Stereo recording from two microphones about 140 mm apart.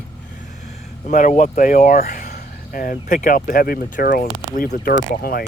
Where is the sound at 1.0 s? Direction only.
70° left (ahead or behind); by 5.5 s 90° left.